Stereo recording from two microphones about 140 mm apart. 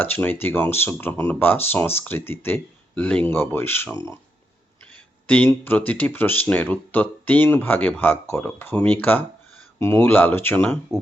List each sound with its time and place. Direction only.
0.0 s speech: 15° left (ahead or behind)
5.2 s speech: 10° left (ahead or behind)